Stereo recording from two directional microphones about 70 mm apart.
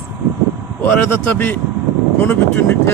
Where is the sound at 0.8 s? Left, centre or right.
Left.